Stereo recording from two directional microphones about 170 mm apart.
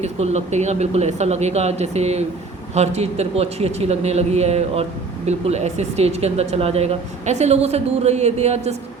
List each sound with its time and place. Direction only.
0.0 s a man's voice: 40° right (ahead or behind)